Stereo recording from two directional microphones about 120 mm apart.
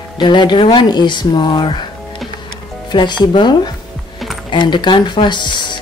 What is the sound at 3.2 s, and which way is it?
Speech, 40° left (ahead or behind).